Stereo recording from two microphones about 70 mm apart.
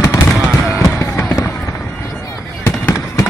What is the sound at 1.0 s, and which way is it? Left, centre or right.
Fireworks, left.